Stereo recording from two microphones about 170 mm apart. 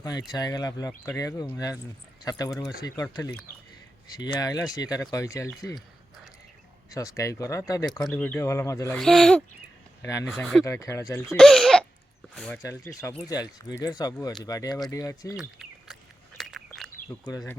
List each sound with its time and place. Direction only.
0.0 s speech: 25° left (ahead or behind)
6.9 s speech: 20° left (ahead or behind)
9.0 s speech: 5° left (ahead or behind)
10.0 s speech: 20° left (ahead or behind)
10.2 s speech: centre (ahead or behind)
10.7 s speech: 15° left (ahead or behind)
11.3 s cough: centre (ahead or behind)
12.3 s speech: 5° left (ahead or behind)
13.2 s speech: 25° left (ahead or behind)
15.4 s bird: centre (ahead or behind)
16.4 s a sound: centre (ahead or behind)
17.1 s speech: 20° left (ahead or behind)